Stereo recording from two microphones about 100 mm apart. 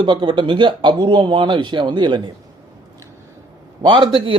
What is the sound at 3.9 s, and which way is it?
Speech, 55° right (ahead or behind).